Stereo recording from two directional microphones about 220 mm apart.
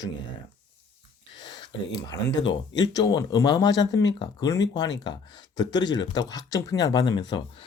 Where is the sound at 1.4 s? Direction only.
20° left (ahead or behind).